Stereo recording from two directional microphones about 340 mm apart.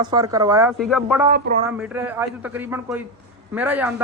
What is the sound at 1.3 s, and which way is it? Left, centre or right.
Speech, right.